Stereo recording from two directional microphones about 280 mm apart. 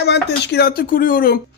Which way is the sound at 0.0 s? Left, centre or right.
Left.